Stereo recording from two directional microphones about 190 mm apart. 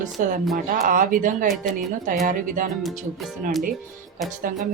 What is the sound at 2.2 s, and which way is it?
Speech, 45° right (ahead or behind).